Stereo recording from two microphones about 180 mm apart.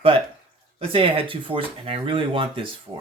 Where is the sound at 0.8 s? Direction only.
30° right (ahead or behind).